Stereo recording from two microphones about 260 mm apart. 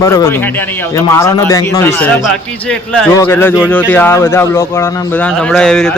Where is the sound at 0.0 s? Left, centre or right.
Centre.